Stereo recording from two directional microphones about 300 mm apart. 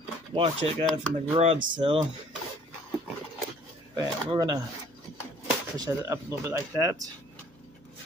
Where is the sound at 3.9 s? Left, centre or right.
Centre.